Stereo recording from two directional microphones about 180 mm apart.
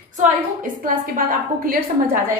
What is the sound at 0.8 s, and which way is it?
Speech, 50° right (ahead or behind).